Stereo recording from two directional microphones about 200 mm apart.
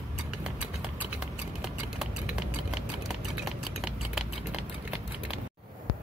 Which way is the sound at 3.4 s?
Centre (ahead or behind).